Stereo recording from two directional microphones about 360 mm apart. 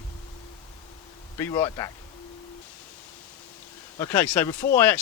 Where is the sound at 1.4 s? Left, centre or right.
Centre.